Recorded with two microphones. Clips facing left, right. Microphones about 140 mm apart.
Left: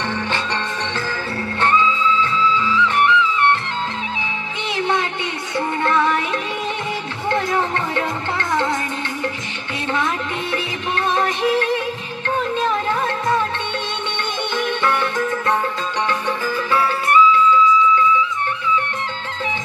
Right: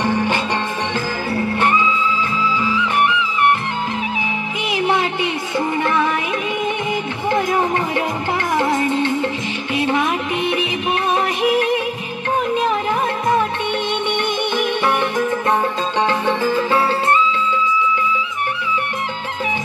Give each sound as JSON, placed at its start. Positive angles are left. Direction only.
{"t": 1.3, "sound": "music", "side_deg": -15}
{"t": 4.7, "sound": "music", "side_deg": -15}
{"t": 7.2, "sound": "music", "side_deg": -15}
{"t": 11.1, "sound": "music", "side_deg": -15}
{"t": 14.6, "sound": "music", "side_deg": -15}